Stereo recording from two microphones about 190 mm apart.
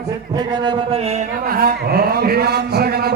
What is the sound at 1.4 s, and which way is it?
A man's voice, 50° right (ahead or behind).